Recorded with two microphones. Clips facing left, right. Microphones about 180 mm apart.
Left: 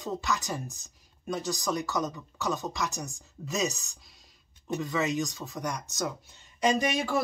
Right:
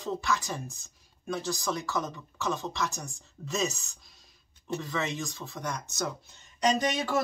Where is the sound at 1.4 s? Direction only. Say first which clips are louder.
Left 3 dB; 15° left (ahead or behind).